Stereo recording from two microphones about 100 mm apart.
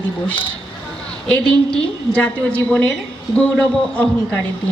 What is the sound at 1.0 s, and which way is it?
A woman's voice, 10° left (ahead or behind).